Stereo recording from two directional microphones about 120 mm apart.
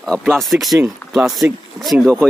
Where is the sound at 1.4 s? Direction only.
15° right (ahead or behind).